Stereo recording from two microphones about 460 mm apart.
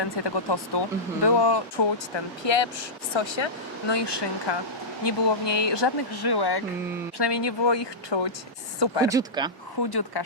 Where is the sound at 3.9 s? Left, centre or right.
Left.